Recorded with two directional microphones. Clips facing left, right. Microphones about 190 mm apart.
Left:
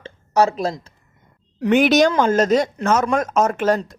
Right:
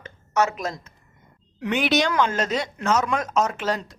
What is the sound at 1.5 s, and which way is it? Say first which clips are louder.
Speech: left 8 dB; 45° left (ahead or behind).